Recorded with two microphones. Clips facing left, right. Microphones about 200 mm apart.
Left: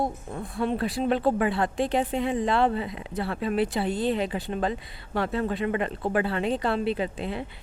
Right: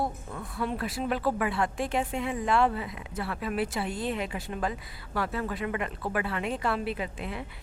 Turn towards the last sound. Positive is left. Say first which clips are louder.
# left 5 dB
turn(degrees=30)  # may be behind; listen again after turning